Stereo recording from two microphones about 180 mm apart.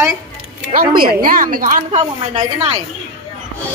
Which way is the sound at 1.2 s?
50° right (ahead or behind).